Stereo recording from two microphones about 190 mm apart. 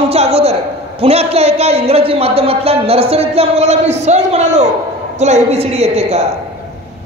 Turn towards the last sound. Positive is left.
turn(degrees=-35)  # may be behind; listen again after turning